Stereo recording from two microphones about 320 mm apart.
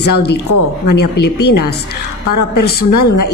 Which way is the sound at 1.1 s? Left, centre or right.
Left.